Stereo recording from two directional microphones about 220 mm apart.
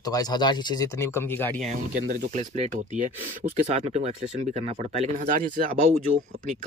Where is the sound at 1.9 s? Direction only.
40° right (ahead or behind).